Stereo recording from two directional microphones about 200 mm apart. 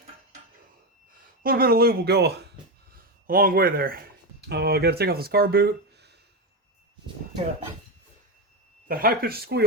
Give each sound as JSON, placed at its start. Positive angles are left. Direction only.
{"t": 1.4, "sound": "speech", "side_deg": -45}
{"t": 8.9, "sound": "speech", "side_deg": -45}